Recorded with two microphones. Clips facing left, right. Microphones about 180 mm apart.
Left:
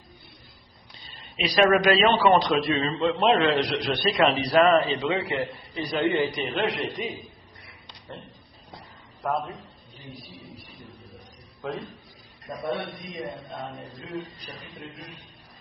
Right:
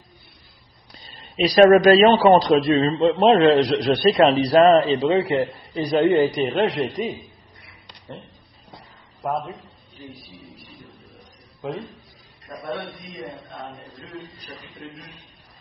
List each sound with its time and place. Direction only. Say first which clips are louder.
1.0 s a man's voice: right 9 dB; 40° right (ahead or behind)
12.5 s a man's voice: left 1 dB; 25° left (ahead or behind)
13.1 s chant: left 1 dB; centre (ahead or behind)